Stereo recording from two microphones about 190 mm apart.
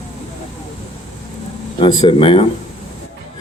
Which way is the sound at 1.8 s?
25° left (ahead or behind).